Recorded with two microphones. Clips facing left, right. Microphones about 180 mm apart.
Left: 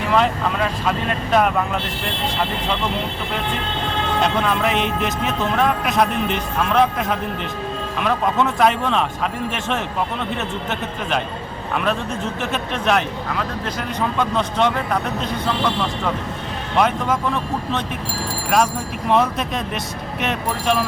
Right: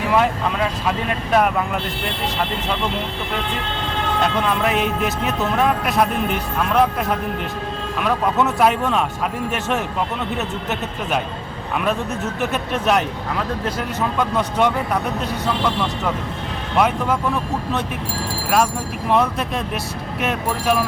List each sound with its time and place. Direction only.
0.1 s speech: 5° right (ahead or behind)
4.2 s speech: centre (ahead or behind)
8.0 s speech: 5° right (ahead or behind)
12.7 s speech: 5° right (ahead or behind)